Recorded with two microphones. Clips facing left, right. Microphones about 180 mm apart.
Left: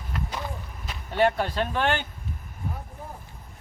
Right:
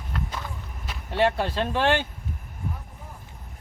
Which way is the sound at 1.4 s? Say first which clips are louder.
Right 2 dB; 30° right (ahead or behind).